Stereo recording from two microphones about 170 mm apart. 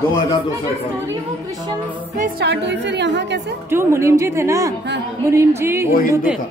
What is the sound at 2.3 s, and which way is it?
A woman's voice, 90° right.